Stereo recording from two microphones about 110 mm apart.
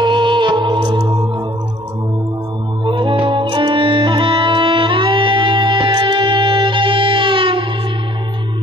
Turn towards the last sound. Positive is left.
turn(degrees=-50)  # may be behind; listen again after turning